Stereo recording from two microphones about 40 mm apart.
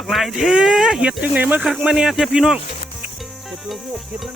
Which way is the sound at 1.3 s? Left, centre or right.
Right.